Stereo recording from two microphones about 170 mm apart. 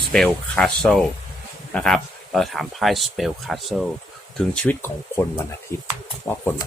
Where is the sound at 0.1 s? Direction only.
5° left (ahead or behind).